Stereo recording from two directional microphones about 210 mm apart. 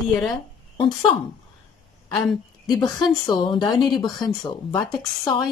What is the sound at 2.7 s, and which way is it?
Speech, 20° left (ahead or behind).